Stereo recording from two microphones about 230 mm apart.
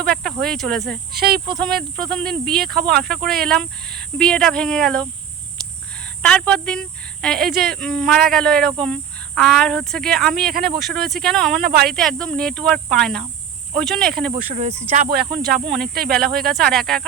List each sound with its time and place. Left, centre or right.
0.1 s speech: centre
1.1 s speech: right
1.5 s speech: centre
6.2 s speech: centre
10.5 s speech: right
10.8 s speech: centre
11.6 s speech: right
11.9 s speech: centre
14.3 s speech: right
16.0 s speech: centre
16.3 s speech: right
16.6 s speech: centre